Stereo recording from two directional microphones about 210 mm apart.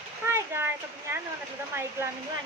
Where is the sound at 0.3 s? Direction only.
10° right (ahead or behind).